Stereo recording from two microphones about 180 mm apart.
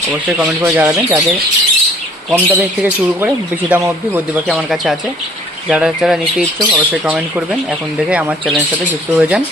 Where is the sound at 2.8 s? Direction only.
10° right (ahead or behind).